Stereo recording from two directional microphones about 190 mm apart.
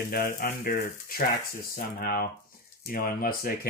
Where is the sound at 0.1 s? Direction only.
50° left (ahead or behind).